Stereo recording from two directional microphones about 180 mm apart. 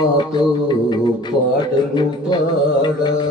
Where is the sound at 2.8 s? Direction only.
25° left (ahead or behind).